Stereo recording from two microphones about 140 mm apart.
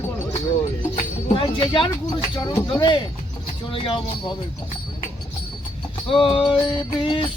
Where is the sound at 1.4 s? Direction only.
35° left (ahead or behind).